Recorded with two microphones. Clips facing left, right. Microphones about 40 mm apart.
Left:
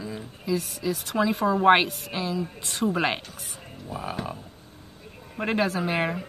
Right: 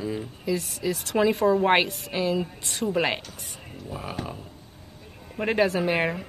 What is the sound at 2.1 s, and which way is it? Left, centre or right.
Speech, right.